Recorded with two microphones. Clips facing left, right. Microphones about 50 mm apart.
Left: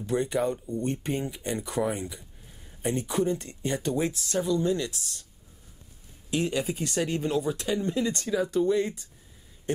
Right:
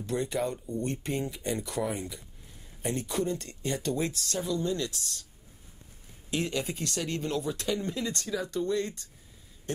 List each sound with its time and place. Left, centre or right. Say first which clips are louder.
0.0 s speech: left 4 dB; centre
6.3 s speech: left 4 dB; centre